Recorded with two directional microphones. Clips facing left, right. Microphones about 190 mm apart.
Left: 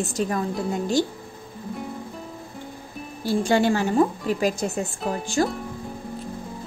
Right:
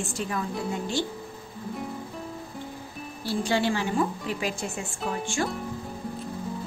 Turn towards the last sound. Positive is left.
turn(degrees=40)  # may be behind; listen again after turning